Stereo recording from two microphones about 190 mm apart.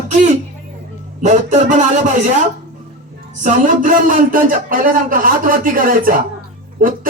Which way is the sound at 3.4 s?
45° right (ahead or behind).